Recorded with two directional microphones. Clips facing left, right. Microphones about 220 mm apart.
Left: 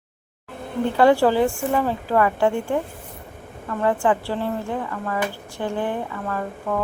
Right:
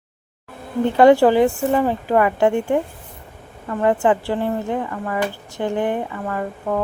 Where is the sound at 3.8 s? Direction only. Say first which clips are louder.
Right 3 dB; 20° right (ahead or behind).